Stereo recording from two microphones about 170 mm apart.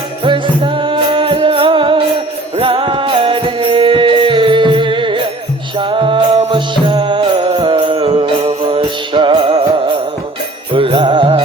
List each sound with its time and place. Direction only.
0.3 s music: 30° right (ahead or behind)